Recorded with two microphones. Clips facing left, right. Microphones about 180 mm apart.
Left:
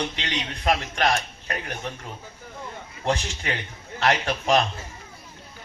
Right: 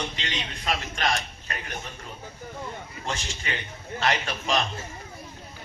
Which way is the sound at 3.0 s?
60° left (ahead or behind).